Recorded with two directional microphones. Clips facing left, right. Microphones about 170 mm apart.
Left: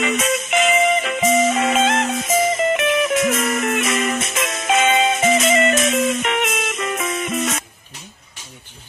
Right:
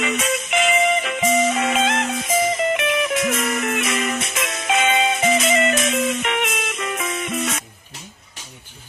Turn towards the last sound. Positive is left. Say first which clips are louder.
# left 2 dB
turn(degrees=45)  # may be behind; listen again after turning